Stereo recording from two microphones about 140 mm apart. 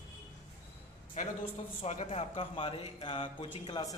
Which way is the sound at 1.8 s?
50° left (ahead or behind).